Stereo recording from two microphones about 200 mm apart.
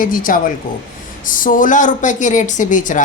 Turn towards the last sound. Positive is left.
turn(degrees=40)  # may be behind; listen again after turning